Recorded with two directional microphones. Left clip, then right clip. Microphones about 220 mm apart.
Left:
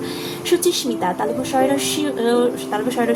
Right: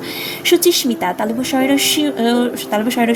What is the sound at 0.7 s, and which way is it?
Speech, 45° right (ahead or behind).